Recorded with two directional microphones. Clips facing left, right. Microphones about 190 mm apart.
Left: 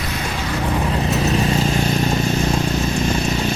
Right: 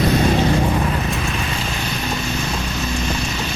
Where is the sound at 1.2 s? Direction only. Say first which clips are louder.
Left 7 dB; 35° left (ahead or behind).